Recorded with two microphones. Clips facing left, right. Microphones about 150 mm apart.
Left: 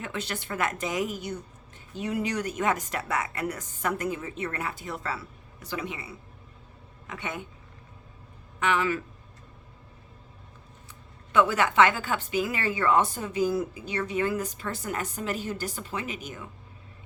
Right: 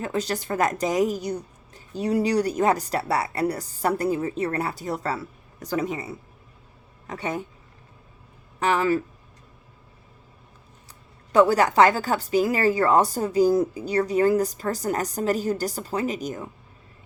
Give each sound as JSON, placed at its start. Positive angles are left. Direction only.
{"t": 0.0, "sound": "a woman's voice", "side_deg": -40}
{"t": 8.5, "sound": "speech", "side_deg": -35}
{"t": 11.3, "sound": "a woman's voice", "side_deg": -40}